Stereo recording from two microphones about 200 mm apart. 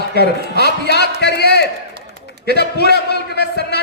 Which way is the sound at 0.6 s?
55° left (ahead or behind).